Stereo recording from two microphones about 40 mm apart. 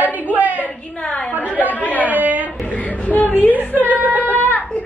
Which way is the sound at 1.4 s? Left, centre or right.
Left.